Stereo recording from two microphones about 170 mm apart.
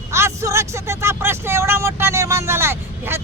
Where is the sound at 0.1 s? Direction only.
15° right (ahead or behind).